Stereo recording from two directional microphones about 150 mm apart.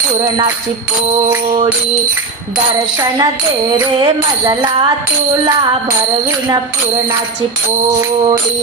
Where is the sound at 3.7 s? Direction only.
25° right (ahead or behind).